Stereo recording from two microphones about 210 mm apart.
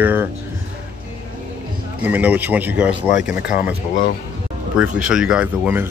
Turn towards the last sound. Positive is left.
turn(degrees=-10)  # may be behind; listen again after turning